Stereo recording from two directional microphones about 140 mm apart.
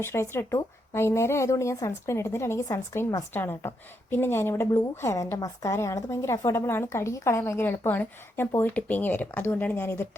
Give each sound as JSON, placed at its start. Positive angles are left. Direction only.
{"t": 0.0, "sound": "a woman's voice", "side_deg": 20}